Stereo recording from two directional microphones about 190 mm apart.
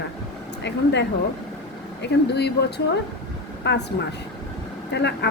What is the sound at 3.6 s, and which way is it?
Speech, 65° left (ahead or behind).